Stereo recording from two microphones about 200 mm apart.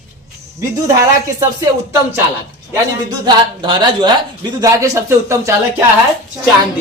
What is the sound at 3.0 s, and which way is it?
Speech, 20° right (ahead or behind).